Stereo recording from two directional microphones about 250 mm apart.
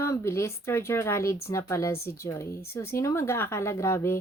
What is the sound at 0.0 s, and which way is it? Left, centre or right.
Speech, centre.